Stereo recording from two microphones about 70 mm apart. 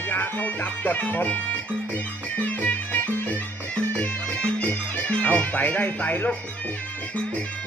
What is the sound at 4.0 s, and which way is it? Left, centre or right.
Music, left.